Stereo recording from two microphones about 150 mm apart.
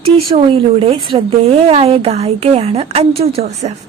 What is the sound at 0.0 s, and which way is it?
A woman's voice, 40° right (ahead or behind).